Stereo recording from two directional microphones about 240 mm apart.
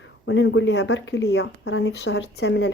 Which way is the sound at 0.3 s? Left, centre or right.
Left.